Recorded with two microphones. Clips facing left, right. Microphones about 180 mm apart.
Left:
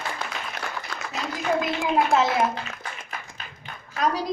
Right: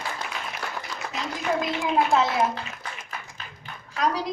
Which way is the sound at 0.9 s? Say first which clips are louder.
Right 1 dB; 55° left (ahead or behind).